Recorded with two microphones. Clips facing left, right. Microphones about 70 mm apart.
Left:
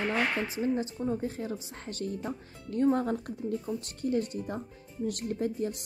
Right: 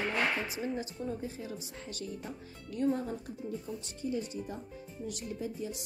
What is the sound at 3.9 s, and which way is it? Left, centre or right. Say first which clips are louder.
A woman's voice: left 5 dB; left.